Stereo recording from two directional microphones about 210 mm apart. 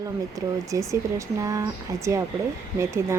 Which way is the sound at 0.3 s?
15° right (ahead or behind).